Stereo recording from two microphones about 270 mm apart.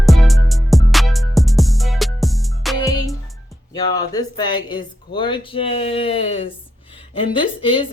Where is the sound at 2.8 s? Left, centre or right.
Centre.